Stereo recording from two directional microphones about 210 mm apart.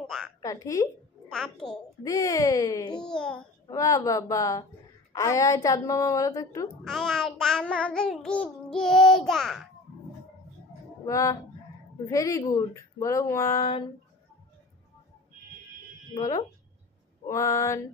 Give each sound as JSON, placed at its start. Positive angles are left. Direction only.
{"t": 0.0, "sound": "a sound", "side_deg": 0}
{"t": 0.4, "sound": "speech", "side_deg": 15}
{"t": 1.3, "sound": "child singing", "side_deg": 5}
{"t": 2.0, "sound": "speech", "side_deg": 15}
{"t": 3.0, "sound": "child singing", "side_deg": 5}
{"t": 3.6, "sound": "speech", "side_deg": 15}
{"t": 6.9, "sound": "child singing", "side_deg": 0}
{"t": 11.1, "sound": "speech", "side_deg": 15}
{"t": 17.3, "sound": "speech", "side_deg": 15}